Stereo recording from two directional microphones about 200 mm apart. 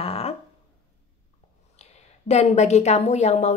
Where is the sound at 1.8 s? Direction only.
35° left (ahead or behind).